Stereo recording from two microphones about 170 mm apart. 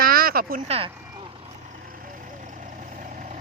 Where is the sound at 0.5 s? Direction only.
35° right (ahead or behind).